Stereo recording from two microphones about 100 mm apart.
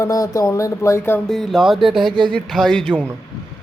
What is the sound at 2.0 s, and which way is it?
Speech, 55° right (ahead or behind).